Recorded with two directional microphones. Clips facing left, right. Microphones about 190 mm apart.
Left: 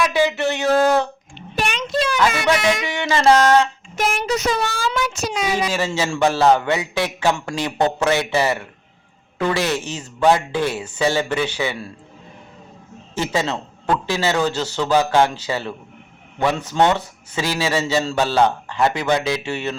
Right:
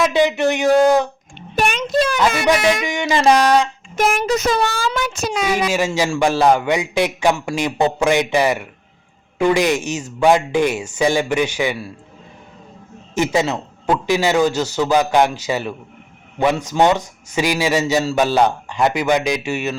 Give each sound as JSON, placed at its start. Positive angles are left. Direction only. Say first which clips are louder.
{"t": 0.0, "sound": "a sound", "louder": "right 3 dB", "side_deg": -20}
{"t": 1.4, "sound": "a sound", "louder": "right 4 dB", "side_deg": -50}
{"t": 2.8, "sound": "a man's voice", "louder": "right 1 dB", "side_deg": -15}
{"t": 3.9, "sound": "a child's voice", "louder": "right 4 dB", "side_deg": -50}
{"t": 5.7, "sound": "a man's voice", "louder": "right 3 dB", "side_deg": -15}
{"t": 13.1, "sound": "a man's voice", "louder": "right 4 dB", "side_deg": -15}